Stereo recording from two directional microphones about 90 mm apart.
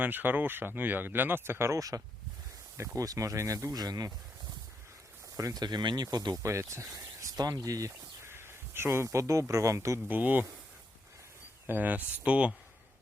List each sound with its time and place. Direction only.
0.0 s speech: 20° right (ahead or behind); by 4.1 s 45° right (ahead or behind)
5.4 s speech: 45° right (ahead or behind)
6.4 s speech: 35° right (ahead or behind)
7.3 s speech: 45° right (ahead or behind)
10.1 s speech: 20° right (ahead or behind)
11.6 s speech: 20° right (ahead or behind)